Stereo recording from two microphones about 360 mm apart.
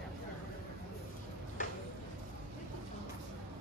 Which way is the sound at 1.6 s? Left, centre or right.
Left.